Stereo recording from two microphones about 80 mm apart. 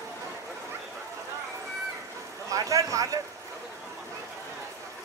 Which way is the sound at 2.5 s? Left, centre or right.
Right.